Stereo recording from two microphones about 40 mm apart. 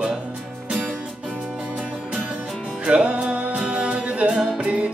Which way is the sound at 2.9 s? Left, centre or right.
Right.